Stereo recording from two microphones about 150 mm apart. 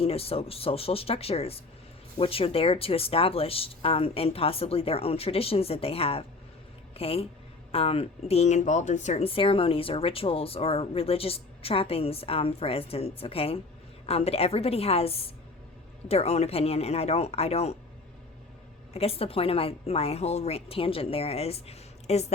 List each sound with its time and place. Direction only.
0.0 s speech: 40° left (ahead or behind)
18.9 s speech: 40° left (ahead or behind)